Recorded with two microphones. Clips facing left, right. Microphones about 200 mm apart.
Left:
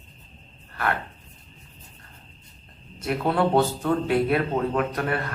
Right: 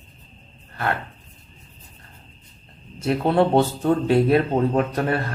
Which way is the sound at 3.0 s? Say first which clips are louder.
Right 4 dB; 30° right (ahead or behind).